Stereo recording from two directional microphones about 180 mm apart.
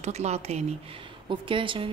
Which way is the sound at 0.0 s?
35° right (ahead or behind).